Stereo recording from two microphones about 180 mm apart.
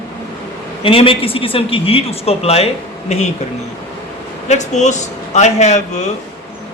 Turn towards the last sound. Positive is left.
turn(degrees=40)  # may be behind; listen again after turning